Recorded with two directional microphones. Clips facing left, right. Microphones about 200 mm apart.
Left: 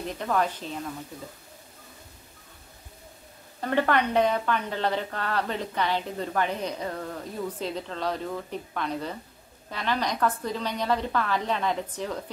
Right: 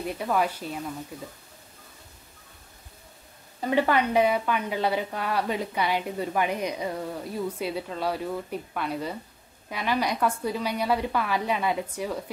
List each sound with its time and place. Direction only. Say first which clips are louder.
0.0 s a woman's voice: right 1 dB; 10° right (ahead or behind)
3.6 s a woman's voice: right 1 dB; 10° right (ahead or behind)